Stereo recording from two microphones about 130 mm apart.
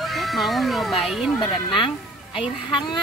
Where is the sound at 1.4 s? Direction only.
40° left (ahead or behind).